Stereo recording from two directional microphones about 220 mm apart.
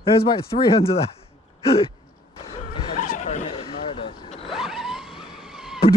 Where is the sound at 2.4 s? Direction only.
35° left (ahead or behind).